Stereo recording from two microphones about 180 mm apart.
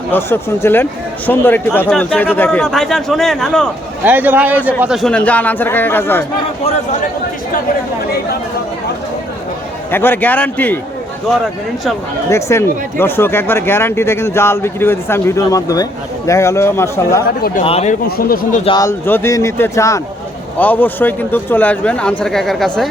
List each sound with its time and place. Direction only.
0.1 s a man's voice: 15° left (ahead or behind)
4.0 s speech: 10° right (ahead or behind); by 6.2 s 10° left (ahead or behind)
9.9 s speech: 10° left (ahead or behind)
12.3 s speech: 15° left (ahead or behind)
17.2 s speech: 55° left (ahead or behind)
17.6 s a man's voice: 35° left (ahead or behind)
18.2 s speech: 55° left (ahead or behind)
18.6 s a man's voice: 25° left (ahead or behind)
18.9 s a man's voice: 15° left (ahead or behind)